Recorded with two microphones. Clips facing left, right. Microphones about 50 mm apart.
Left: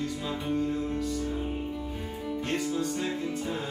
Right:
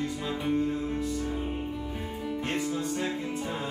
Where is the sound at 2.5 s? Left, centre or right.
Centre.